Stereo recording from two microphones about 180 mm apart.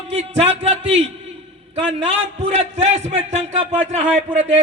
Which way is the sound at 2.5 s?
35° right (ahead or behind).